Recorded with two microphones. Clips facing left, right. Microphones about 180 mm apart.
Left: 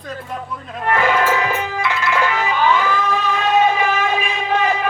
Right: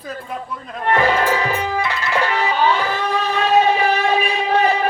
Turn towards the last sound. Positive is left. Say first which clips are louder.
# right 2 dB
turn(degrees=-35)  # may be behind; listen again after turning